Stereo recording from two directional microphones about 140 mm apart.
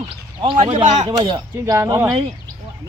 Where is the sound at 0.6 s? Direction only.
55° right (ahead or behind).